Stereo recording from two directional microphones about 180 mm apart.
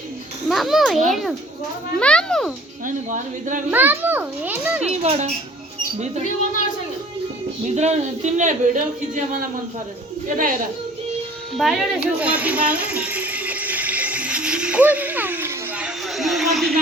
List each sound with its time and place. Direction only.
0.4 s a sound: centre (ahead or behind)
1.1 s a child's voice: centre (ahead or behind)
2.8 s speech: 45° right (ahead or behind)
3.7 s a child's voice: 10° right (ahead or behind)
4.9 s a woman's voice: 35° right (ahead or behind)
7.6 s a woman's voice: 40° right (ahead or behind)
11.5 s a sound: centre (ahead or behind)
16.1 s speech: centre (ahead or behind)